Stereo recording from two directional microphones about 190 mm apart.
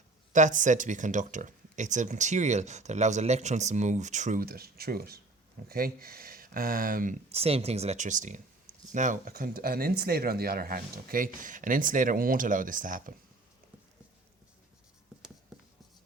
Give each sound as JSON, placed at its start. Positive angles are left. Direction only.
{"t": 0.3, "sound": "speech", "side_deg": -40}
{"t": 15.5, "sound": "writing", "side_deg": 0}